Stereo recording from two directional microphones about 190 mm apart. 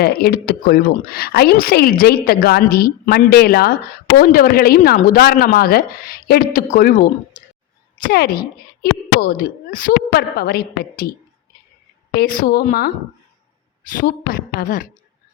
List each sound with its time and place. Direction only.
0.0 s speech: 55° left (ahead or behind)
12.1 s speech: 50° left (ahead or behind)
14.0 s speech: 45° left (ahead or behind)